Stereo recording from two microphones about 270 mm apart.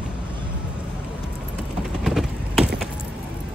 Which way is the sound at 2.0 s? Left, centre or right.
Centre.